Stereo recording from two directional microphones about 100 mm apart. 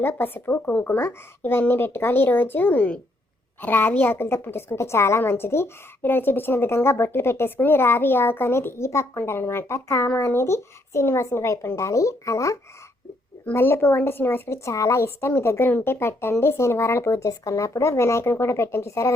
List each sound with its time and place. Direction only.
0.0 s a woman's voice: 20° left (ahead or behind)